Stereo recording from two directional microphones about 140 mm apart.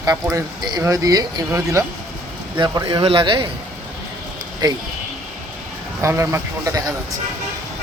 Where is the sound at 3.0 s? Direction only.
40° right (ahead or behind).